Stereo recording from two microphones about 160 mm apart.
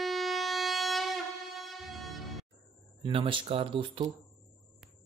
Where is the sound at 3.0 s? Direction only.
30° right (ahead or behind).